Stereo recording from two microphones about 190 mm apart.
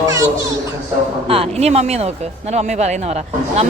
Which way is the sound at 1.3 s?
30° right (ahead or behind).